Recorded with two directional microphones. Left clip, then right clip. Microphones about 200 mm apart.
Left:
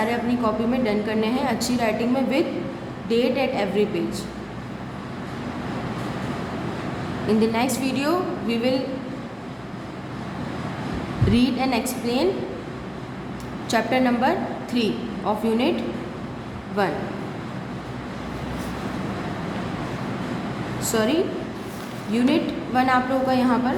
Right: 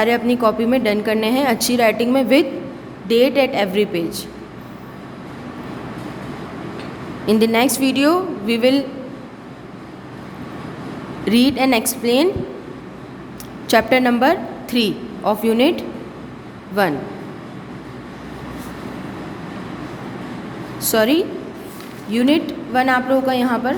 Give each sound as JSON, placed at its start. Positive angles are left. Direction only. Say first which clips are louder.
{"t": 0.0, "sound": "a woman's voice", "louder": "right 7 dB", "side_deg": -50}
{"t": 7.3, "sound": "a woman's voice", "louder": "right 6 dB", "side_deg": -50}
{"t": 11.3, "sound": "a woman's voice", "louder": "right 7 dB", "side_deg": -45}
{"t": 13.7, "sound": "a woman's voice", "louder": "right 7 dB", "side_deg": -45}
{"t": 16.8, "sound": "a woman's voice", "louder": "right 6 dB", "side_deg": -45}
{"t": 20.8, "sound": "a woman's voice", "louder": "right 6 dB", "side_deg": -50}